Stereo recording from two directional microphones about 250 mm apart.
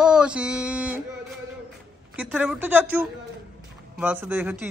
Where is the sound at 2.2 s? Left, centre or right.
Centre.